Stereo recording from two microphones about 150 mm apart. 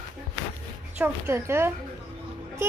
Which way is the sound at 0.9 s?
15° right (ahead or behind).